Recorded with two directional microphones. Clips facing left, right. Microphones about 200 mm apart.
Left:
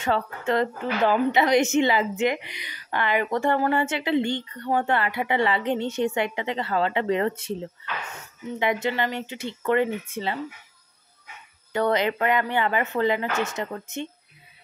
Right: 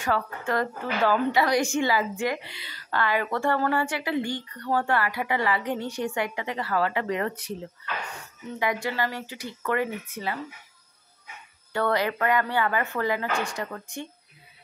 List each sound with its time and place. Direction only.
0.0 s a woman's voice: 25° left (ahead or behind)
11.7 s a woman's voice: 20° left (ahead or behind)